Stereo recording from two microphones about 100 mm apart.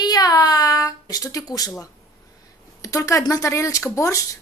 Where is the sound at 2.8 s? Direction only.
35° left (ahead or behind).